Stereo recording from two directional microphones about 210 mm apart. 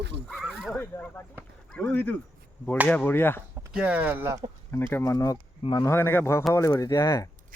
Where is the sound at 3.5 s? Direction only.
5° right (ahead or behind).